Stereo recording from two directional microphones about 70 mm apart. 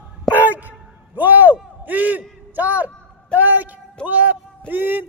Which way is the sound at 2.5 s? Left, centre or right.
Right.